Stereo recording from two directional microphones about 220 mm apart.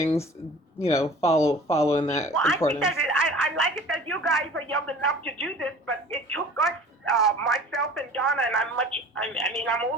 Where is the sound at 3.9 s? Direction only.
5° left (ahead or behind).